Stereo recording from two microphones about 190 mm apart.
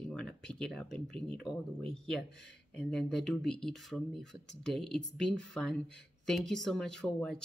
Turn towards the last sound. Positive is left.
turn(degrees=5)  # may be behind; listen again after turning